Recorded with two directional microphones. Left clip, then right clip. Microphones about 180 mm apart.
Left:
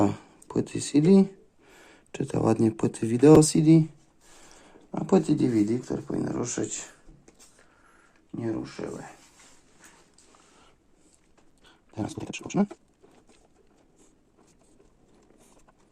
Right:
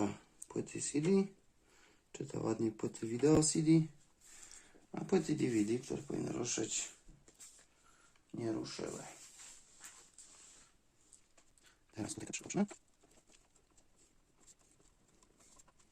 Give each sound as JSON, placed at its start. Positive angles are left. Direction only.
{"t": 0.0, "sound": "speech", "side_deg": 55}
{"t": 4.9, "sound": "speech", "side_deg": 30}
{"t": 8.3, "sound": "speech", "side_deg": 25}
{"t": 11.9, "sound": "speech", "side_deg": 25}